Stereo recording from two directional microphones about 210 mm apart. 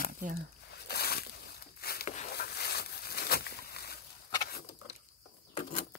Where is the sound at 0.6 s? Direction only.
50° left (ahead or behind).